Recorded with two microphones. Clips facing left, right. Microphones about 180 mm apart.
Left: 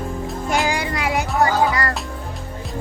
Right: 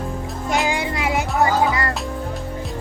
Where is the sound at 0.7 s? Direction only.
25° right (ahead or behind).